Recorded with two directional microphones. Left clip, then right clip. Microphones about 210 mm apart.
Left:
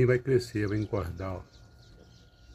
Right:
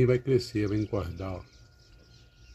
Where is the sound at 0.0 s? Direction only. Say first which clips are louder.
Even; 5° right (ahead or behind).